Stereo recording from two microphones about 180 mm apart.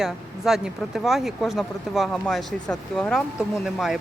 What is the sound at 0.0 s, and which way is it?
Speech, centre (ahead or behind).